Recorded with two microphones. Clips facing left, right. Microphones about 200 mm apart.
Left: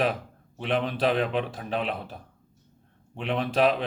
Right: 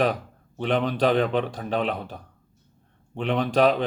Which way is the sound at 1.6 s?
40° right (ahead or behind).